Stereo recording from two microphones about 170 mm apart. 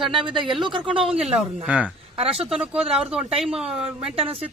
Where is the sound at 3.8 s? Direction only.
35° right (ahead or behind).